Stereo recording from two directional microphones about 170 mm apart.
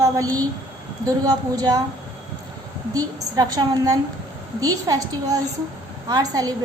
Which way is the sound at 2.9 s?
20° right (ahead or behind).